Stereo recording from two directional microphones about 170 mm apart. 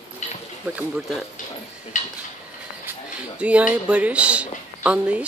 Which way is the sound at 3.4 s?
5° right (ahead or behind).